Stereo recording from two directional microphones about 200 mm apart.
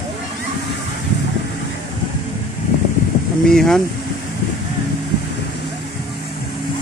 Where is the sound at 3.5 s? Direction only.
Centre (ahead or behind).